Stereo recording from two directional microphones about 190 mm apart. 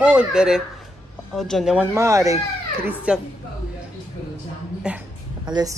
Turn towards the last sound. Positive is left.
turn(degrees=-20)  # may be behind; listen again after turning